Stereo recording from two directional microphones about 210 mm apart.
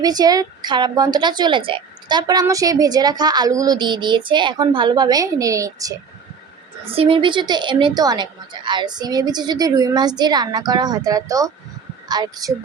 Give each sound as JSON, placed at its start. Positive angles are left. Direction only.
{"t": 0.0, "sound": "a woman's voice", "side_deg": -20}
{"t": 6.8, "sound": "a woman's voice", "side_deg": -25}